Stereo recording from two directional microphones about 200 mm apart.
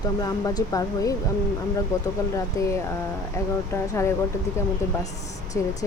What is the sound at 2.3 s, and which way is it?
Speech, 15° left (ahead or behind).